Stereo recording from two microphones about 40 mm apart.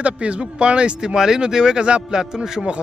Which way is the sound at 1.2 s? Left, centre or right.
Centre.